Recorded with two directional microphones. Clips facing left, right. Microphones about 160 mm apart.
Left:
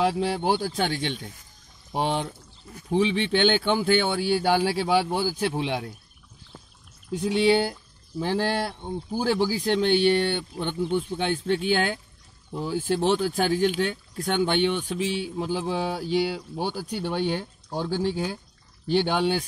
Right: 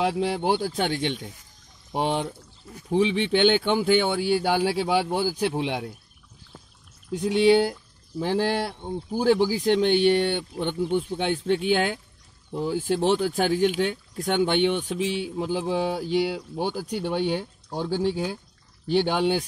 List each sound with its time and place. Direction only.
0.0 s speech: 15° right (ahead or behind)
7.2 s speech: 15° right (ahead or behind)